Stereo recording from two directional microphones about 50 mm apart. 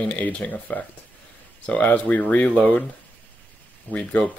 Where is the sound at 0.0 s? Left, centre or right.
Left.